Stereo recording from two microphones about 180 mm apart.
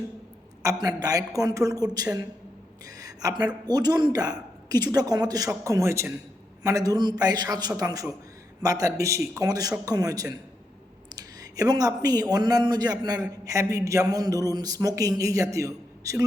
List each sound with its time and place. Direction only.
0.6 s a man's voice: 20° right (ahead or behind)